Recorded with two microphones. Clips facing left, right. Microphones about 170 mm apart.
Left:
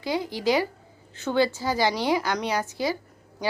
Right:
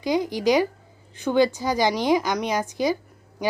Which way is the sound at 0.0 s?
15° right (ahead or behind).